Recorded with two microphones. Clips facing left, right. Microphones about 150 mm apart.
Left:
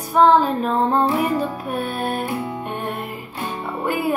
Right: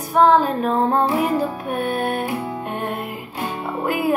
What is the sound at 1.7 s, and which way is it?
Music, 55° right (ahead or behind).